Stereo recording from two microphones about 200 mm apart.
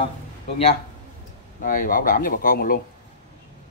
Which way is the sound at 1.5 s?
45° left (ahead or behind).